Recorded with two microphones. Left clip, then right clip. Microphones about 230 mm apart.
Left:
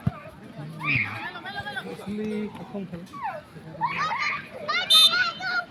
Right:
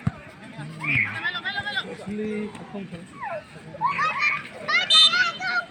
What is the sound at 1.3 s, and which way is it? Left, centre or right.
Chatter, centre.